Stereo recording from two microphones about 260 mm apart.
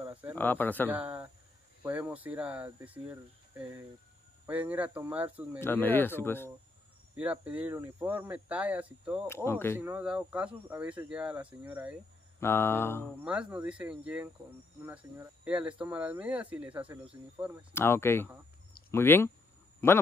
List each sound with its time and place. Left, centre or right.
0.0 s snake: centre
0.4 s speech: centre
0.8 s speech: centre
5.6 s speech: centre
7.2 s speech: centre
9.3 s speech: centre
9.8 s speech: centre
12.4 s speech: centre
13.2 s speech: centre
17.4 s speech: centre
17.7 s speech: centre